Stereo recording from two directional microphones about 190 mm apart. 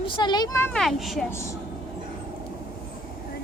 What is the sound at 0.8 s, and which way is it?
Speech, centre (ahead or behind).